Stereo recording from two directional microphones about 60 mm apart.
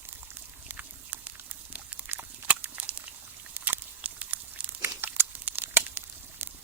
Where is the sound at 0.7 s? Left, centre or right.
Right.